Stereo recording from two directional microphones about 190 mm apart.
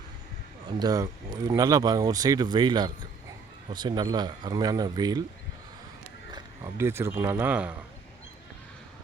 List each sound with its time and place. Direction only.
0.8 s speech: 20° right (ahead or behind)
6.3 s speech: 15° right (ahead or behind)